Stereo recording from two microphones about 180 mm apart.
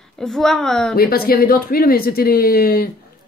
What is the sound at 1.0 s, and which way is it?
Speech, 55° left (ahead or behind).